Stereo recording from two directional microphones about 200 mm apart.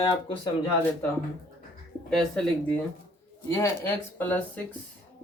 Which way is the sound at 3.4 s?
15° left (ahead or behind).